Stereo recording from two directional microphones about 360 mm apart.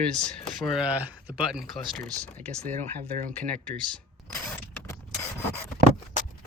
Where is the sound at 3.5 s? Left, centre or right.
Centre.